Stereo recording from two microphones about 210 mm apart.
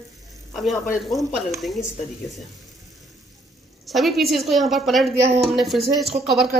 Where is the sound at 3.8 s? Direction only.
Centre (ahead or behind).